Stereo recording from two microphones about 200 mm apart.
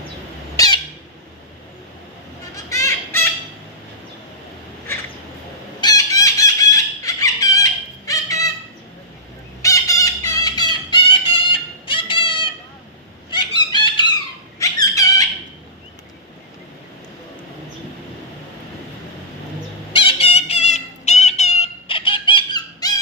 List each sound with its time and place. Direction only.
0.5 s squawk: 20° left (ahead or behind)
2.6 s fowl: 15° left (ahead or behind)
5.8 s fowl: 20° left (ahead or behind)
9.6 s fowl: 15° left (ahead or behind)
13.3 s squawk: 20° left (ahead or behind)
14.6 s squeak: 15° left (ahead or behind)
19.9 s fowl: 25° left (ahead or behind)